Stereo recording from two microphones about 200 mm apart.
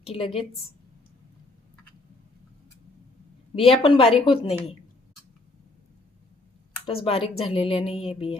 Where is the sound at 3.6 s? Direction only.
25° left (ahead or behind).